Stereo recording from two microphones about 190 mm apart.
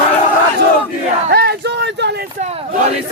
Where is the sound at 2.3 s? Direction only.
35° right (ahead or behind).